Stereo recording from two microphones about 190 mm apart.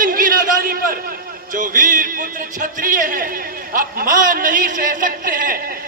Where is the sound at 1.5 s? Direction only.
45° right (ahead or behind).